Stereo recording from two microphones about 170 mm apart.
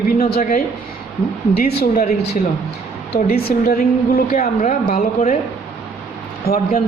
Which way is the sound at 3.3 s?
65° left (ahead or behind).